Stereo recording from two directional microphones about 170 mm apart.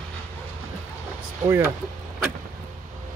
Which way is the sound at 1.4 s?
15° right (ahead or behind).